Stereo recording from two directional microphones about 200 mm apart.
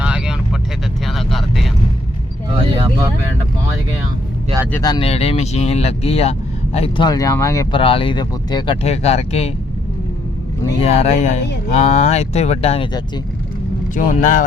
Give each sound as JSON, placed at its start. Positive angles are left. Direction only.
{"t": 0.0, "sound": "vehicle", "side_deg": -5}
{"t": 4.8, "sound": "speech", "side_deg": 25}
{"t": 7.8, "sound": "speech", "side_deg": 25}
{"t": 10.8, "sound": "speech", "side_deg": 30}
{"t": 13.9, "sound": "speech", "side_deg": 40}